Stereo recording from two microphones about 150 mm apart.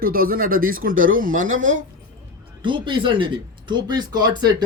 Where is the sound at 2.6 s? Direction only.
35° right (ahead or behind).